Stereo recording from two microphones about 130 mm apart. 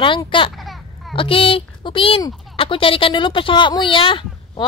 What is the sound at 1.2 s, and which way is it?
A woman's voice, 45° left (ahead or behind).